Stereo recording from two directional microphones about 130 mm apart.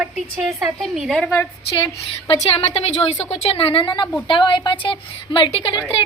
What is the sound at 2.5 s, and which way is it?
A woman's voice, 50° left (ahead or behind).